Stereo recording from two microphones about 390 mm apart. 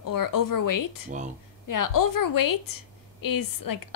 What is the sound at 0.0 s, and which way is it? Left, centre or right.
A woman's voice, left.